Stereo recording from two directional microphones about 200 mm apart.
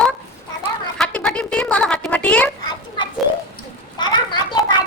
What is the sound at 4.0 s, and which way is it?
Children playing, 20° left (ahead or behind).